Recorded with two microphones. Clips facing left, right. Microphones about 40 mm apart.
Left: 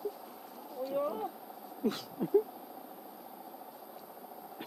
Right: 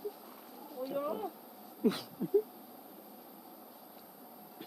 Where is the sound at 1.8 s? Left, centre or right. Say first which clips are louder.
Right 2 dB; centre.